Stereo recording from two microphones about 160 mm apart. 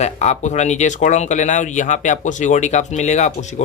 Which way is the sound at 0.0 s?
45° left (ahead or behind).